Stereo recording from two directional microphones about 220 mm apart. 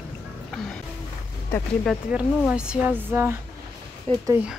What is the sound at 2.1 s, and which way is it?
Speech, 5° right (ahead or behind).